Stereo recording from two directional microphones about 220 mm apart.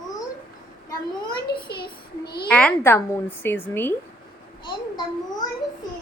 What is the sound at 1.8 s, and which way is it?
Child singing, 45° left (ahead or behind).